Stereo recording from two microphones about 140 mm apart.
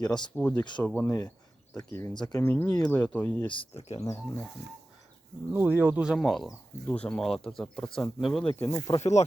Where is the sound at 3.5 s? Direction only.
40° left (ahead or behind).